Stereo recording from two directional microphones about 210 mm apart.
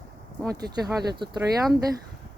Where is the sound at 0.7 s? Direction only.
20° right (ahead or behind).